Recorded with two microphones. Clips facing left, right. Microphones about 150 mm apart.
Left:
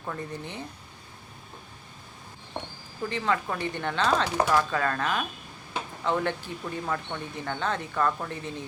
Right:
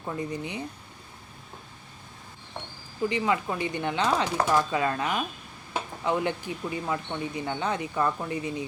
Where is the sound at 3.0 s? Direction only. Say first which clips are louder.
Right 2 dB; 15° right (ahead or behind).